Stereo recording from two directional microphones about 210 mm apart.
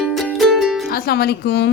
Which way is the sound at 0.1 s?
Centre (ahead or behind).